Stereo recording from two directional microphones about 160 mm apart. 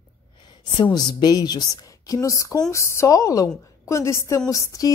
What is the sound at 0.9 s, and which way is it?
A woman's voice, 25° left (ahead or behind).